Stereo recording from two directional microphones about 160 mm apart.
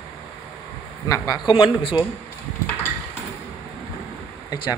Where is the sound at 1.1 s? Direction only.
25° left (ahead or behind).